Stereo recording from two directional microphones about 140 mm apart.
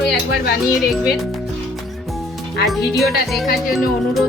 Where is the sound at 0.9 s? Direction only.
Centre (ahead or behind).